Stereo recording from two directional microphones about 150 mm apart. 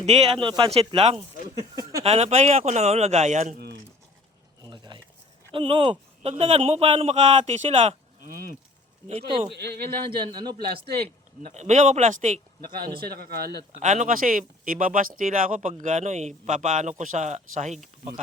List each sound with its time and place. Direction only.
0.0 s a man's voice: 45° right (ahead or behind)
0.4 s speech: 35° right (ahead or behind)
1.5 s a sound: 25° right (ahead or behind)
2.0 s a man's voice: 45° right (ahead or behind)
4.6 s a sound: 30° right (ahead or behind)
5.5 s a man's voice: 35° right (ahead or behind)
8.2 s cattle: 70° right (ahead or behind)
9.0 s speech: 40° right (ahead or behind)
9.5 s speech: 90° right
10.1 s speech: 30° right (ahead or behind)
11.5 s a man's voice: 50° right (ahead or behind)
13.0 s speech: 90° right
13.7 s speech: 50° right (ahead or behind)